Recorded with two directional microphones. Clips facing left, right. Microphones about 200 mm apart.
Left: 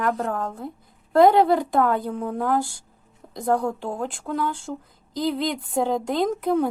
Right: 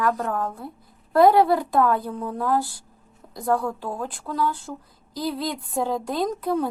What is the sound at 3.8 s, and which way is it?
Speech, 25° left (ahead or behind).